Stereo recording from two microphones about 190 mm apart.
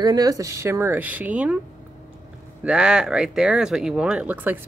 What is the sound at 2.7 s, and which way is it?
Speech, 5° right (ahead or behind).